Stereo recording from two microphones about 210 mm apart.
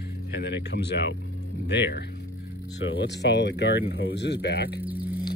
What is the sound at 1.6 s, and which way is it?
Speech, 55° left (ahead or behind).